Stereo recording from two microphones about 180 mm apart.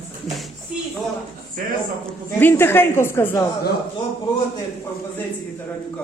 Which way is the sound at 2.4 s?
10° left (ahead or behind).